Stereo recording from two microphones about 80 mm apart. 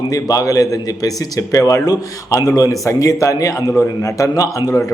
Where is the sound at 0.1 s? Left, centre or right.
Left.